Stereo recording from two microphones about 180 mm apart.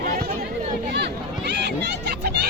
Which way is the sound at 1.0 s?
70° right (ahead or behind).